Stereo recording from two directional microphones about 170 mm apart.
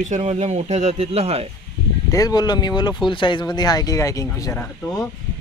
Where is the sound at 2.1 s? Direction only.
20° left (ahead or behind).